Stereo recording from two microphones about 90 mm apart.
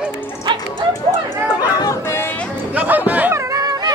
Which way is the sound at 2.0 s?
30° left (ahead or behind).